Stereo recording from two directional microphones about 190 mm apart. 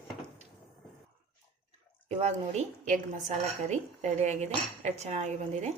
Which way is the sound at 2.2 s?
35° right (ahead or behind).